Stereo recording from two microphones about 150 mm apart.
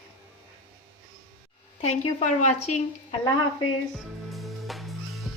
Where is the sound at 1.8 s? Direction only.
50° left (ahead or behind).